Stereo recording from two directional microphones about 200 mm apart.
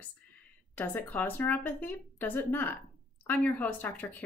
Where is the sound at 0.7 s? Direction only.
10° left (ahead or behind).